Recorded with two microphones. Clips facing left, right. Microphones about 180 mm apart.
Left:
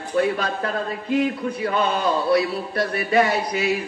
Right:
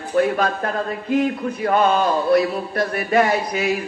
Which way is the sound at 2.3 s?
50° right (ahead or behind).